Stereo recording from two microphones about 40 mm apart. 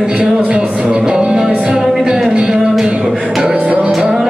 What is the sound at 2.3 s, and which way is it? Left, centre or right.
Music, centre.